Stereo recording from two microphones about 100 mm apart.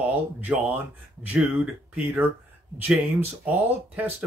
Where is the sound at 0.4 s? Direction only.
15° right (ahead or behind).